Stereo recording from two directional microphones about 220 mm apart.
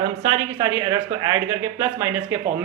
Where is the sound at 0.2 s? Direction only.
25° right (ahead or behind).